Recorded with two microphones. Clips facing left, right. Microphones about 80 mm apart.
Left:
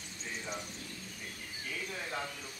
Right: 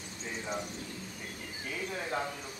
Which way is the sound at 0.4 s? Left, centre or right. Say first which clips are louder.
Right 5 dB; centre.